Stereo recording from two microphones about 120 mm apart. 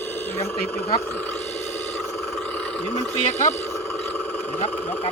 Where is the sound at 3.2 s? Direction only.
80° left.